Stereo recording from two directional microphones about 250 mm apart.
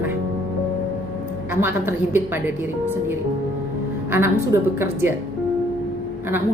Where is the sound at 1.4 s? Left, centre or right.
Centre.